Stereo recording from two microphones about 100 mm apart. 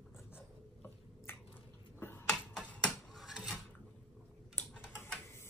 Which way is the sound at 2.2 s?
5° left (ahead or behind).